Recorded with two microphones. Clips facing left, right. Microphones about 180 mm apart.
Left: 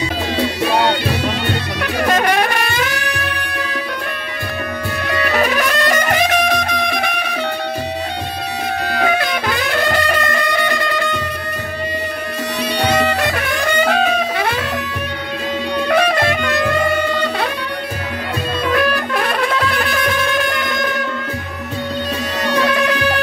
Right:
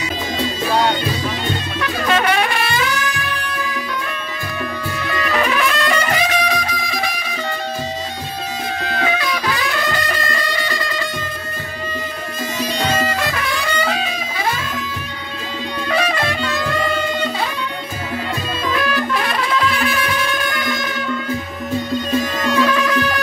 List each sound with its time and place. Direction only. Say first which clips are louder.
0.4 s music: left 2 dB; 70° left (ahead or behind)
2.0 s music: left 1 dB; 45° left (ahead or behind); by 3.6 s 65° left (ahead or behind)
5.3 s music: left 1 dB; 40° left (ahead or behind); by 7.3 s 65° left (ahead or behind)
8.8 s music: left 3 dB; 65° left (ahead or behind)
12.7 s music: left 4 dB; 65° left (ahead or behind)
15.9 s music: left 4 dB; 60° left (ahead or behind)
18.7 s music: left 2 dB; 60° left (ahead or behind)
22.4 s music: left 3 dB; 70° left (ahead or behind)